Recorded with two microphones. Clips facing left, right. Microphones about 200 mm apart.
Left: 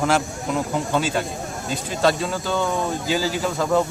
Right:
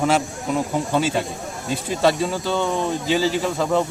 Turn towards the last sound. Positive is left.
turn(degrees=0)  # may be behind; listen again after turning